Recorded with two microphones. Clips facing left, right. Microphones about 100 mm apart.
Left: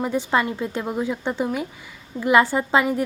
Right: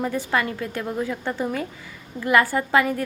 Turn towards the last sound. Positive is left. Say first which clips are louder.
# left 1 dB
turn(degrees=20)  # may be behind; listen again after turning